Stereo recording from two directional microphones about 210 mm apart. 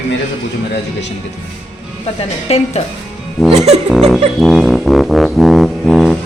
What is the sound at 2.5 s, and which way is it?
Speech, 30° left (ahead or behind).